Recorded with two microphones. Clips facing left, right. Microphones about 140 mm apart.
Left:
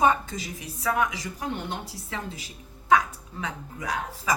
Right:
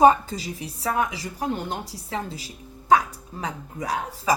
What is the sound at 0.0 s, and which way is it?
A woman's voice, 35° right (ahead or behind).